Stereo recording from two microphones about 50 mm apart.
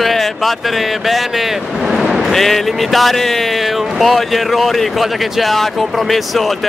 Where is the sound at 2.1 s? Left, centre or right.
Centre.